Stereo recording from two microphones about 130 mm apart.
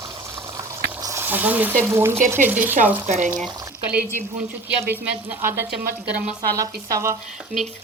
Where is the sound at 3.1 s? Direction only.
65° right (ahead or behind).